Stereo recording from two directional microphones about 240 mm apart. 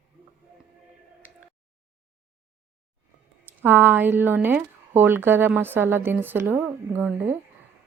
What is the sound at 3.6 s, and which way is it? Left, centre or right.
Speech, centre.